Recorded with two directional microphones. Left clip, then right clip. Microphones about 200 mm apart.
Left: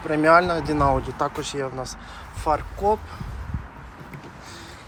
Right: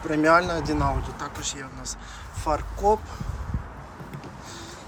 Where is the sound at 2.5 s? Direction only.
15° right (ahead or behind).